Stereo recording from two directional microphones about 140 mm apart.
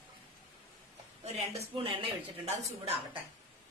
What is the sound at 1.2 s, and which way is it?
Speech, 50° right (ahead or behind).